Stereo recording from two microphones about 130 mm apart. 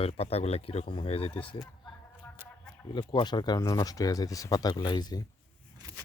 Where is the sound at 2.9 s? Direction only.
35° left (ahead or behind).